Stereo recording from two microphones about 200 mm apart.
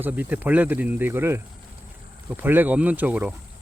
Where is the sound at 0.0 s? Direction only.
10° right (ahead or behind).